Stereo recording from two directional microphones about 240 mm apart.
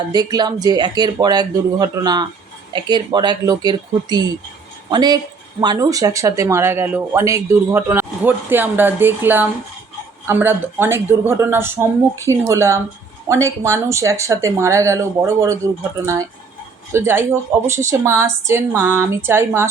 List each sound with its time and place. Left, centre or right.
0.1 s speech: centre